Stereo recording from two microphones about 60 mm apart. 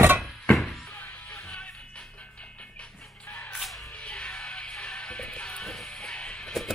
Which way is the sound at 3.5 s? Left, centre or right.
Centre.